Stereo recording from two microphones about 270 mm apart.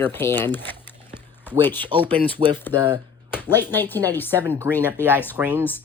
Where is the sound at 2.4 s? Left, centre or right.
Centre.